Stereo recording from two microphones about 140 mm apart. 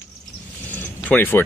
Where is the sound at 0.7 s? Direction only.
15° left (ahead or behind).